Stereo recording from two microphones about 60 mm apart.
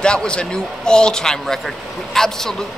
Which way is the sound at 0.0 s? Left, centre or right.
Centre.